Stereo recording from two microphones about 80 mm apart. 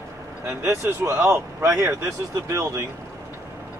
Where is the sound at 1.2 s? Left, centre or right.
Right.